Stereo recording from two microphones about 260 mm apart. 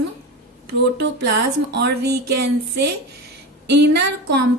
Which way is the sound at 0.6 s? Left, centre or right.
Right.